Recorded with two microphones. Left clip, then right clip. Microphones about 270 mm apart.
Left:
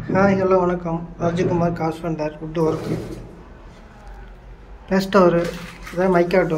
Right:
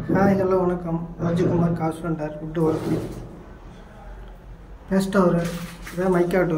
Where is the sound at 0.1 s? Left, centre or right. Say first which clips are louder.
Left 3 dB; centre.